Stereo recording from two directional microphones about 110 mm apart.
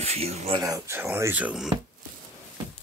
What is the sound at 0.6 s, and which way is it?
Speech, 30° right (ahead or behind).